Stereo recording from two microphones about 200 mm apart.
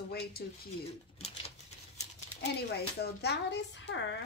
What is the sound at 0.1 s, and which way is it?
Speech, 50° left (ahead or behind).